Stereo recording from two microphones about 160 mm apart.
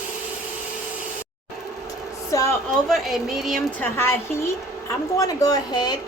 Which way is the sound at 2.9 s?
Centre (ahead or behind).